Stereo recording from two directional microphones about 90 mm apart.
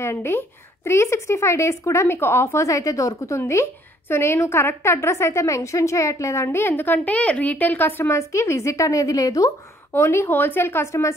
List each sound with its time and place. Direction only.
0.0 s a woman's voice: 30° left (ahead or behind)
8.2 s speech: 30° left (ahead or behind)
9.9 s a woman's voice: 30° left (ahead or behind)